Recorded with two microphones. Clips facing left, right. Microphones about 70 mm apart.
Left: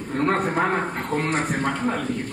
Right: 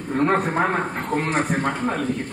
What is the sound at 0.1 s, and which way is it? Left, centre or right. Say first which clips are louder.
A man's voice: right 2 dB; centre.